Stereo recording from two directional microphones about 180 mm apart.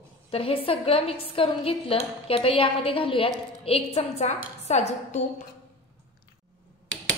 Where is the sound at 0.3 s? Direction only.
30° left (ahead or behind).